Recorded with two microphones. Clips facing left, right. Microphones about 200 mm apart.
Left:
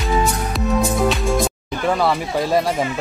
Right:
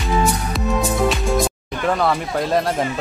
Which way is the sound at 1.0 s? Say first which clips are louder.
Even; centre (ahead or behind).